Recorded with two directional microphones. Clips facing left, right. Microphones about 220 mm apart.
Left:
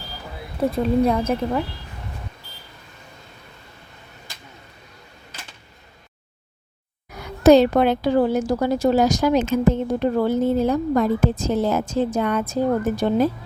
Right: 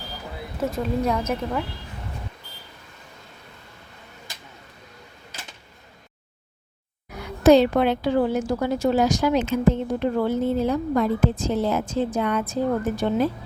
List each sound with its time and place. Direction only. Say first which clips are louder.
1.0 s a woman's voice: left 4 dB; 30° left (ahead or behind)
7.4 s a woman's voice: left 2 dB; 40° left (ahead or behind)